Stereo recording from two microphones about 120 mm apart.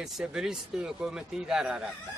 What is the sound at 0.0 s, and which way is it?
Speech, 5° right (ahead or behind).